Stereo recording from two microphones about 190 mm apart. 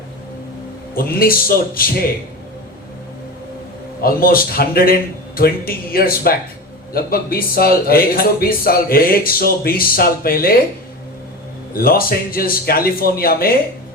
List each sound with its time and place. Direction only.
0.9 s speech: 50° left (ahead or behind)
4.0 s speech: 50° left (ahead or behind)
11.7 s speech: 50° left (ahead or behind)